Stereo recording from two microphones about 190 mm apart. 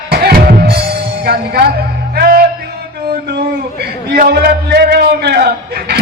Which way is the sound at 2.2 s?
50° right (ahead or behind).